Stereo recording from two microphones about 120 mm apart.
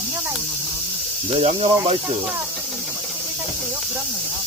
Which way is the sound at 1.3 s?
50° right (ahead or behind).